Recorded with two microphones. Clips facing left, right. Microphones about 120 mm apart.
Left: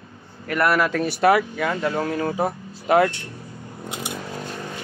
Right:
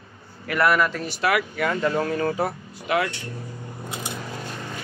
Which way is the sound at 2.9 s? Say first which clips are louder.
Left 6 dB; 40° left (ahead or behind).